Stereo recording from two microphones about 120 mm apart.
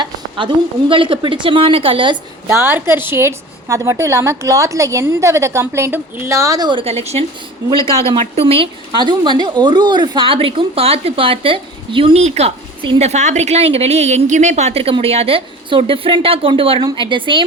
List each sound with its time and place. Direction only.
0.0 s a woman's voice: 40° right (ahead or behind)
2.5 s a woman's voice: 20° right (ahead or behind); by 6.8 s 35° right (ahead or behind)
6.8 s a woman's voice: 60° right (ahead or behind); by 12.2 s 45° right (ahead or behind)
12.2 s a woman's voice: 65° right (ahead or behind); by 17.4 s 45° right (ahead or behind)